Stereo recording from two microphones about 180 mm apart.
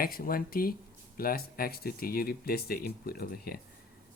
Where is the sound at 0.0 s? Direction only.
55° left (ahead or behind).